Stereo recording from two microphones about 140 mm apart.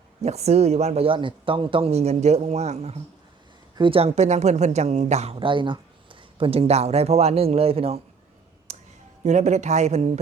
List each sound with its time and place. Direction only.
0.2 s speech: 50° right (ahead or behind)
3.8 s speech: 40° right (ahead or behind)
8.7 s a sound: 55° right (ahead or behind)
9.2 s speech: 55° right (ahead or behind)